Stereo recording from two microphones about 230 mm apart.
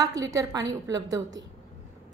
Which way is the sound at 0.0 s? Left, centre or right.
Centre.